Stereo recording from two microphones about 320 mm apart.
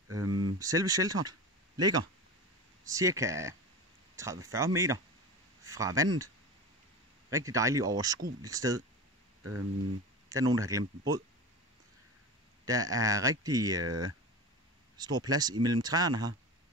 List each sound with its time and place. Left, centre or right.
0.3 s speech: centre
9.4 s speech: right
10.3 s speech: centre
12.6 s speech: centre
13.8 s speech: right
15.0 s speech: centre